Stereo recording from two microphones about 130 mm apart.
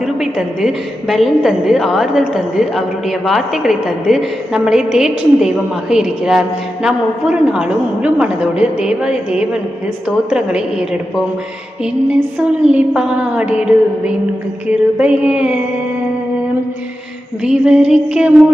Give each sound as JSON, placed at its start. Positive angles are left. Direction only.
{"t": 0.0, "sound": "a woman's voice", "side_deg": -5}
{"t": 12.6, "sound": "a woman's voice", "side_deg": -5}
{"t": 17.4, "sound": "a woman's voice", "side_deg": -5}